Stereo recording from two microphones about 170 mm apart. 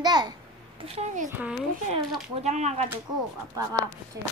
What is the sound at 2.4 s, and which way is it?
Speech, 40° right (ahead or behind).